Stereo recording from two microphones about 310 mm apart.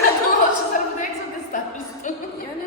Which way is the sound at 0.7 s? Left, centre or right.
Left.